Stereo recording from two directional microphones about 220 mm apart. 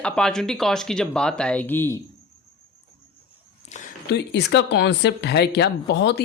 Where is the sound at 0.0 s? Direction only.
5° left (ahead or behind).